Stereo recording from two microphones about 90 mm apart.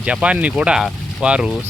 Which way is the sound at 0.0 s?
15° right (ahead or behind).